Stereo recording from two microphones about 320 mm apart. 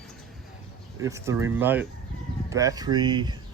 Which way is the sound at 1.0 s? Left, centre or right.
Centre.